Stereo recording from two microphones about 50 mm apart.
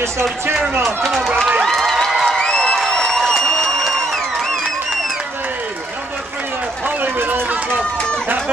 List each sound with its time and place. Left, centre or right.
0.8 s speech: centre
1.6 s a sound: centre
2.0 s crowd: centre
2.3 s crowd: centre
7.0 s run: right